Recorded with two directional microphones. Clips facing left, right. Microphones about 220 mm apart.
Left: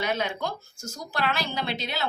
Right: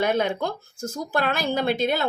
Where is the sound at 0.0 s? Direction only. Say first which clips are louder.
Right 6 dB; 50° right (ahead or behind).